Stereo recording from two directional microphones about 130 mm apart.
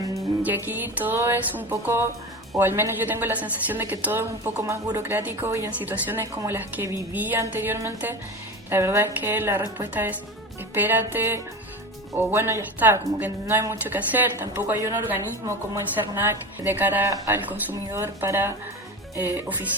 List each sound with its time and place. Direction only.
0.4 s speech: 15° right (ahead or behind)